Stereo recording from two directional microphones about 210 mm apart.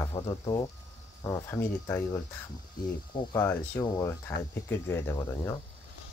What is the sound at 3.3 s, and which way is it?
Speech, 15° left (ahead or behind).